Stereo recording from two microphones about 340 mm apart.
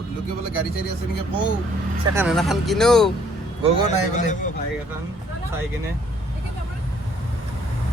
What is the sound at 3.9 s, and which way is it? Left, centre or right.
Speech, left.